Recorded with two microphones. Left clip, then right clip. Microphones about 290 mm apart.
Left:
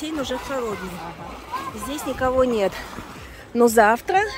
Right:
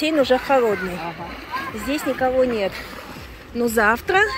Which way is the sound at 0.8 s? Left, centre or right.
Left.